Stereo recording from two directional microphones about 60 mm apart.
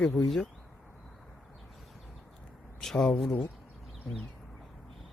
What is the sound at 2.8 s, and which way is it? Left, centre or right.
Speech, centre.